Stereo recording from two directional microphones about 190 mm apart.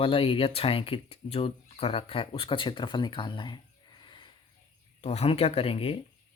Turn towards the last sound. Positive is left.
turn(degrees=30)  # may be behind; listen again after turning